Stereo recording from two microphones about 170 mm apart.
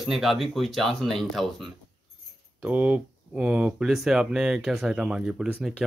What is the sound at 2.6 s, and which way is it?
Speech, 10° right (ahead or behind).